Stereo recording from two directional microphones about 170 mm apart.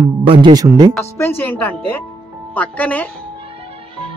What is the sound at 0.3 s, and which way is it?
Speech, 25° right (ahead or behind).